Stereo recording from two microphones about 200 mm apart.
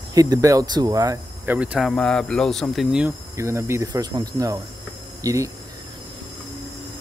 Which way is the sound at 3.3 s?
15° right (ahead or behind).